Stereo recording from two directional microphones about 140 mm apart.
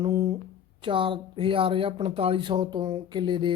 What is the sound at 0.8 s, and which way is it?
Speech, 35° right (ahead or behind).